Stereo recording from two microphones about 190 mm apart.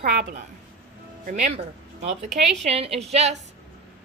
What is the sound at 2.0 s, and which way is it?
A woman's voice, 35° right (ahead or behind).